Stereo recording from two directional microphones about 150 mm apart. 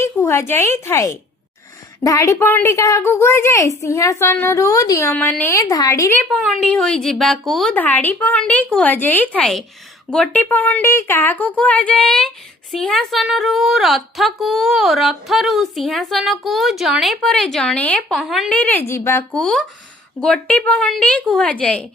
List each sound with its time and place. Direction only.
0.0 s a woman's voice: 20° left (ahead or behind)
6.3 s a woman's voice: 5° left (ahead or behind)
7.7 s a woman's voice: 10° left (ahead or behind)
18.2 s a woman's voice: centre (ahead or behind)
18.5 s speech: 10° left (ahead or behind)
19.4 s a woman's voice: 5° left (ahead or behind)